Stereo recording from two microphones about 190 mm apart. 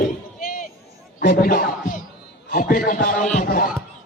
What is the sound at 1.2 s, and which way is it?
A man's voice, 50° left (ahead or behind).